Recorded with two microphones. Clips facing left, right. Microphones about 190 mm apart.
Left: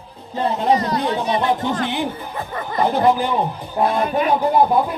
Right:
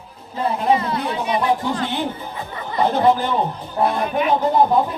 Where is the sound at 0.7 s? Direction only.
40° left (ahead or behind).